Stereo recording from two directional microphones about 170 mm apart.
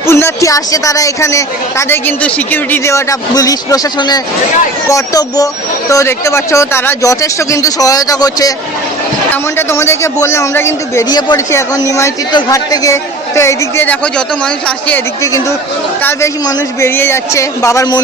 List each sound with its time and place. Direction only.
0.0 s a woman's voice: 15° left (ahead or behind)
16.0 s a woman's voice: 15° left (ahead or behind)